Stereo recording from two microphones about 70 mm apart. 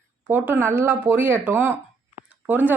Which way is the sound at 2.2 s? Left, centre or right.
Right.